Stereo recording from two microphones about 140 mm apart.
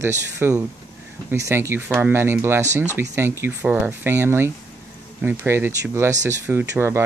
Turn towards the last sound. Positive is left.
turn(degrees=-20)  # may be behind; listen again after turning